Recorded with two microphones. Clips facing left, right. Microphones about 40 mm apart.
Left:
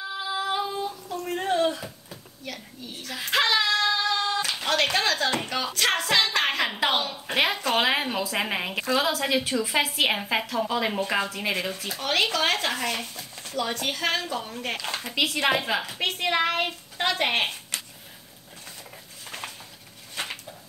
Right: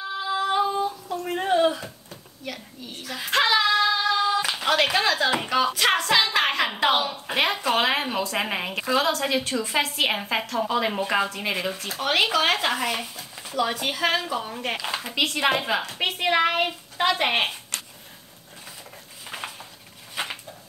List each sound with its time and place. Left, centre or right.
0.2 s female singing: centre
2.4 s speech: centre
20.2 s a sound: centre